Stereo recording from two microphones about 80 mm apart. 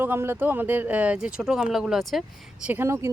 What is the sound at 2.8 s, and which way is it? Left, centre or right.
Speech, right.